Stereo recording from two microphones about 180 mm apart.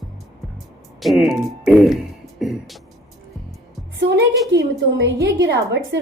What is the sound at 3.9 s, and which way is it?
Music, 75° right (ahead or behind).